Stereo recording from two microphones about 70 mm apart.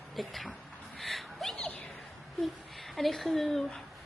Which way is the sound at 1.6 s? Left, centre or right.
Left.